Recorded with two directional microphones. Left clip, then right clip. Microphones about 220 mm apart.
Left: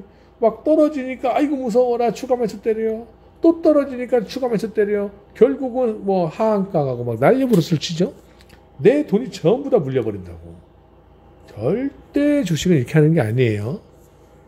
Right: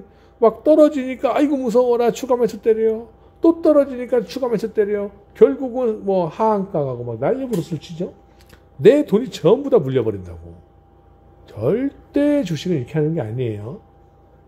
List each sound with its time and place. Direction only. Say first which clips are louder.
0.4 s a man's voice: right 3 dB; 25° right (ahead or behind); by 7.0 s centre (ahead or behind)
7.1 s speech: left 5 dB; 15° left (ahead or behind)
8.8 s a man's voice: right 3 dB; 20° right (ahead or behind)
11.4 s speech: right 2 dB; 15° right (ahead or behind)
12.5 s speech: left 4 dB; 15° left (ahead or behind)